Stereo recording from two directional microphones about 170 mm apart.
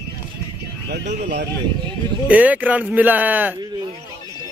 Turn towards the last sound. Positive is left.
turn(degrees=-10)  # may be behind; listen again after turning